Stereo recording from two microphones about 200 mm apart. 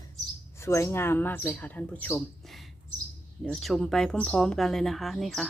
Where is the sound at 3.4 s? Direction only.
Centre (ahead or behind).